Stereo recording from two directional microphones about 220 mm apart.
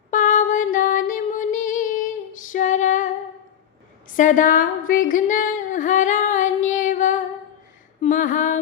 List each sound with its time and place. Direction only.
0.1 s music: 35° left (ahead or behind)
2.4 s female singing: 35° left (ahead or behind)
4.1 s yodeling: 35° left (ahead or behind)
8.0 s a sound: 35° left (ahead or behind)